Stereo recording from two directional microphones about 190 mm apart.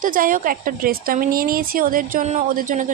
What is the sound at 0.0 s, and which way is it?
A woman's voice, 45° right (ahead or behind).